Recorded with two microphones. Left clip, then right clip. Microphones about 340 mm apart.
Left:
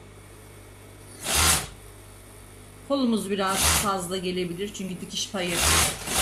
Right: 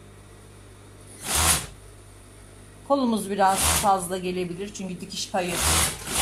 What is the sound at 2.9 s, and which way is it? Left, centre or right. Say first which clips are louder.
Speech: right 2 dB; centre.